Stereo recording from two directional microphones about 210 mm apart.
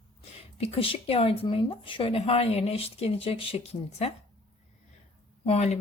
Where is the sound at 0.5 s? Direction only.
25° left (ahead or behind).